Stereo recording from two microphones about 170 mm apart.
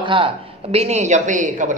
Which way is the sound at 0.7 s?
40° right (ahead or behind).